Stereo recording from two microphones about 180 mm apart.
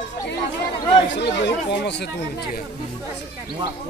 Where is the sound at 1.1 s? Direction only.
75° left (ahead or behind).